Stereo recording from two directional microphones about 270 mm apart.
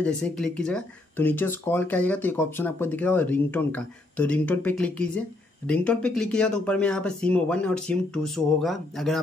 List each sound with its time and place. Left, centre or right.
0.0 s speech: centre